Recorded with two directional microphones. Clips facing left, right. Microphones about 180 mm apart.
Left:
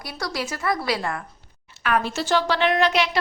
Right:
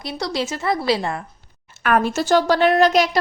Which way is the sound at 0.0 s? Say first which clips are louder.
Right 5 dB; 25° right (ahead or behind).